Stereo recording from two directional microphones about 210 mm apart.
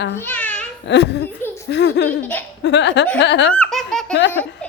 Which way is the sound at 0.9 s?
55° left (ahead or behind).